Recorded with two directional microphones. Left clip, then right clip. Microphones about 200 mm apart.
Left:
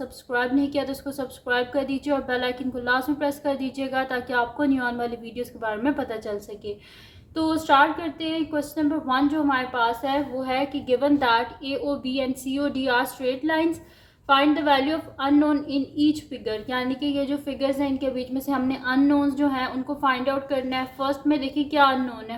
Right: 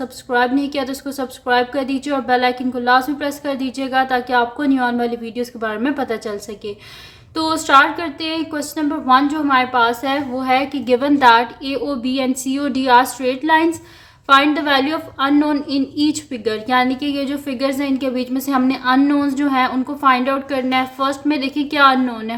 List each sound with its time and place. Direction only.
0.0 s a woman's voice: 15° right (ahead or behind)